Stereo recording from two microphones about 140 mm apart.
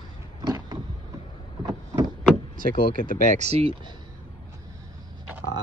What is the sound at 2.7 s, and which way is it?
Speech, 80° left.